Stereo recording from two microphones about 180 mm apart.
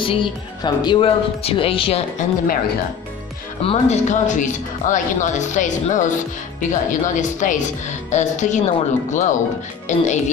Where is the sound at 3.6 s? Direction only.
35° left (ahead or behind).